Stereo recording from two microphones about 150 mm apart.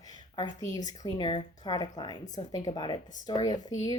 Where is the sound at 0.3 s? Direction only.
20° left (ahead or behind).